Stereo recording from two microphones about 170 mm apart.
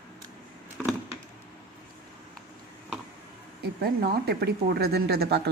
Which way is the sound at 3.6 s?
65° right (ahead or behind).